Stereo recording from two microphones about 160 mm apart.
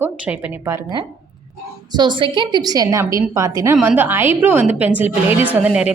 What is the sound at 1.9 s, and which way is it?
A woman's voice, 30° right (ahead or behind).